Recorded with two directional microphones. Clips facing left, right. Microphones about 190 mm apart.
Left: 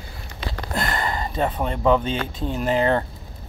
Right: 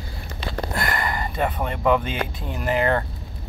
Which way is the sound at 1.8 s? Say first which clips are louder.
Left 1 dB; 10° right (ahead or behind).